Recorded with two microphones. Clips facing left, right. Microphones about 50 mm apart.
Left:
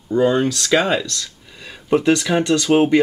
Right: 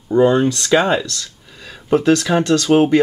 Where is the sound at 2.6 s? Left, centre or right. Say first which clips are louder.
Right 1 dB; centre.